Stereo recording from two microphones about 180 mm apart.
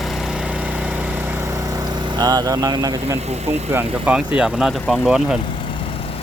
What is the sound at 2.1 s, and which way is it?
Speech, 20° right (ahead or behind).